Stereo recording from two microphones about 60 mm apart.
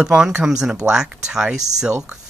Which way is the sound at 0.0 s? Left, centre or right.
Centre.